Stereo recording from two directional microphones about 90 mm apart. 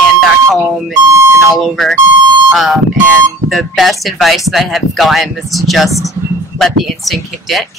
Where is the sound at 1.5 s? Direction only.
Centre (ahead or behind).